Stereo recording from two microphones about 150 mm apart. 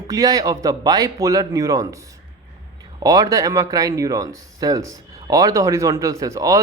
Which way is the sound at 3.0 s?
25° right (ahead or behind).